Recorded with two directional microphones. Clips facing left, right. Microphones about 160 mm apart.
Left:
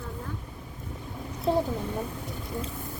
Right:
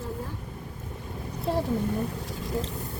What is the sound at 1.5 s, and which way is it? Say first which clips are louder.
Speech: left 3 dB; centre (ahead or behind).